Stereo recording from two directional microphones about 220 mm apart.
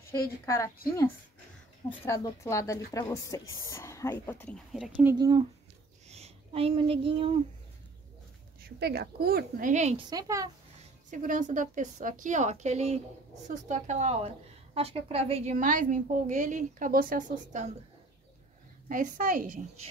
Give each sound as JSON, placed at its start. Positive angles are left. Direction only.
{"t": 0.1, "sound": "speech", "side_deg": 15}
{"t": 1.9, "sound": "speech", "side_deg": 15}
{"t": 4.7, "sound": "speech", "side_deg": 0}
{"t": 5.1, "sound": "speech", "side_deg": -20}
{"t": 6.0, "sound": "speech", "side_deg": -30}
{"t": 8.6, "sound": "a woman's voice", "side_deg": -45}
{"t": 10.0, "sound": "a woman's voice", "side_deg": -15}
{"t": 11.1, "sound": "a woman's voice", "side_deg": -35}
{"t": 18.9, "sound": "a woman's voice", "side_deg": -35}